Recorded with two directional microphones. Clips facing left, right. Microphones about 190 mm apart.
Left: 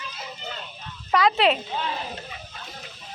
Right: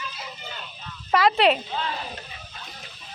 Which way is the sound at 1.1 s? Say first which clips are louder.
Right 1 dB; centre (ahead or behind).